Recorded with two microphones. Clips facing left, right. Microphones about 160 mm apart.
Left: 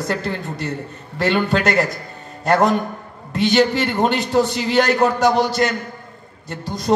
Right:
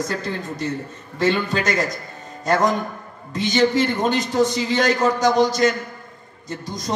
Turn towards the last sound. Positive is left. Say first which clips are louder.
# left 7 dB
turn(degrees=65)  # may be behind; listen again after turning